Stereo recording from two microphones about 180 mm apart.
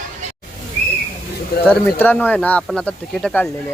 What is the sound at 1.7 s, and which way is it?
Speech, 10° left (ahead or behind).